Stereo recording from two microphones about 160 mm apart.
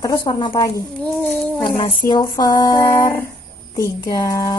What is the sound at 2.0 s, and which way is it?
Speech, 25° left (ahead or behind).